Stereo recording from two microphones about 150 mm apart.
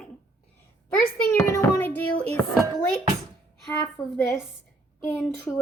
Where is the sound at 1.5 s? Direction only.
15° left (ahead or behind).